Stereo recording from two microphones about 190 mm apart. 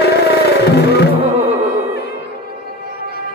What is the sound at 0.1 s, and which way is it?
Music, 60° left (ahead or behind).